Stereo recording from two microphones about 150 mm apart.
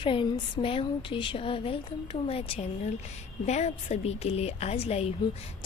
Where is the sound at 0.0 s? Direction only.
35° left (ahead or behind).